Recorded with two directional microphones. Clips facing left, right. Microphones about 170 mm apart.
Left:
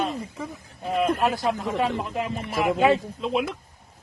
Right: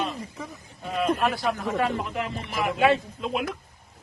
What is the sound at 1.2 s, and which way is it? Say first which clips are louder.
Speech: left 2 dB; 20° left (ahead or behind).